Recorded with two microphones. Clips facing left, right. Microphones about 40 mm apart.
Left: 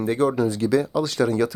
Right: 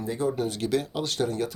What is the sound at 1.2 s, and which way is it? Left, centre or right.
Speech, left.